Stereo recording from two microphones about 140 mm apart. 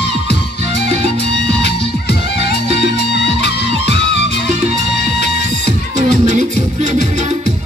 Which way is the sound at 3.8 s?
50° right (ahead or behind).